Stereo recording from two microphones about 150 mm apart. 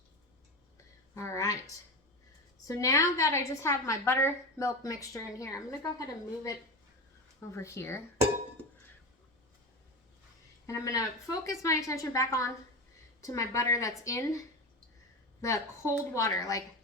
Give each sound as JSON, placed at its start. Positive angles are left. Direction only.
{"t": 1.1, "sound": "a sound", "side_deg": 20}
{"t": 2.6, "sound": "a woman's voice", "side_deg": 20}
{"t": 10.7, "sound": "a woman's voice", "side_deg": 20}